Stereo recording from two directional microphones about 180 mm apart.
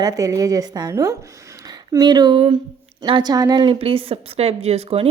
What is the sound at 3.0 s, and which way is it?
A woman's voice, 25° right (ahead or behind).